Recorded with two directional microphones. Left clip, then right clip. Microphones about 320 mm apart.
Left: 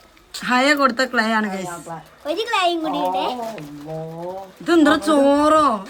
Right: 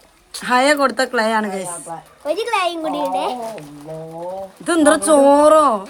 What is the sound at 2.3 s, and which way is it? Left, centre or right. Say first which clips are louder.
A child's voice: right 1 dB; centre.